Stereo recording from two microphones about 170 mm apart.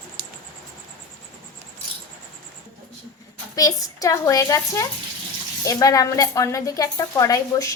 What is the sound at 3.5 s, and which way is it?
A woman's voice, 20° left (ahead or behind).